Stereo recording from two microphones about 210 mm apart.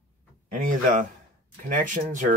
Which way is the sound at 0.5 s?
40° right (ahead or behind).